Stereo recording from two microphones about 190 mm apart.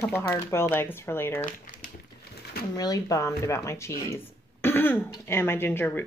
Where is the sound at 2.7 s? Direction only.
20° left (ahead or behind).